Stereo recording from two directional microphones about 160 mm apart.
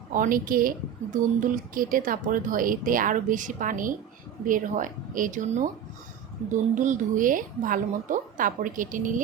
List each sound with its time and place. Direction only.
0.1 s speech: 60° right (ahead or behind)